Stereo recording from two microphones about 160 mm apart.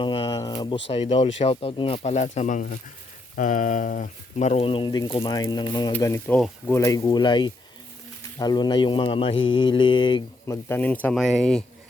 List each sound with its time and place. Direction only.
0.0 s speech: 30° left (ahead or behind); by 4.4 s 60° left (ahead or behind)
4.4 s speech: 40° left (ahead or behind)
10.4 s speech: 15° left (ahead or behind)